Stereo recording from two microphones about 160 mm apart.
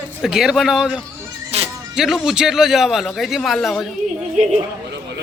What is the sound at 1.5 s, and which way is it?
Music, 40° right (ahead or behind).